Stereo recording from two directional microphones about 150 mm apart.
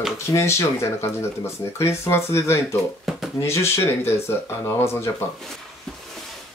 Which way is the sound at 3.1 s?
Centre (ahead or behind).